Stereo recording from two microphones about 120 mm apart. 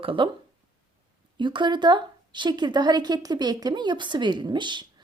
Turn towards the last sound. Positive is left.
turn(degrees=-40)  # may be behind; listen again after turning